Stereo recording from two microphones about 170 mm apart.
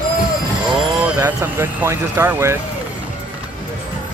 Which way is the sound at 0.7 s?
5° right (ahead or behind).